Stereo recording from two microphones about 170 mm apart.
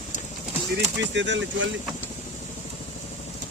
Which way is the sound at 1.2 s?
90° right.